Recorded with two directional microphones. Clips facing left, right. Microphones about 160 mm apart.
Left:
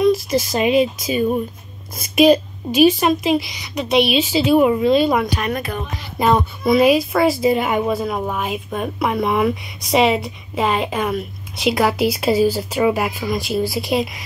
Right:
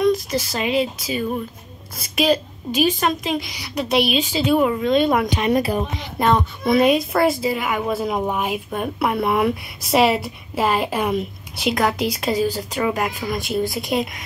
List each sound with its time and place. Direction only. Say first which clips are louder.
0.0 s a woman's voice: left 3 dB; 10° left (ahead or behind)
3.5 s a woman's voice: left 3 dB; 5° right (ahead or behind); by 4.9 s 15° left (ahead or behind)
4.9 s speech: left 1 dB; centre (ahead or behind)
5.3 s speech: right 4 dB; 30° right (ahead or behind)
6.1 s speech: left 2 dB; 5° left (ahead or behind)
7.4 s a woman's voice: left 5 dB; 30° left (ahead or behind)
7.9 s a woman's voice: even; 10° right (ahead or behind)